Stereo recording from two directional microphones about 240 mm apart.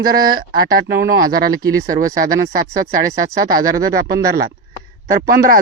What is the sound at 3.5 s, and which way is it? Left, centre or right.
Speech, right.